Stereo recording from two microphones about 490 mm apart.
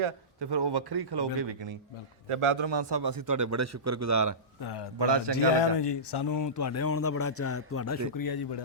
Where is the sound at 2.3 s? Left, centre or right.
Right.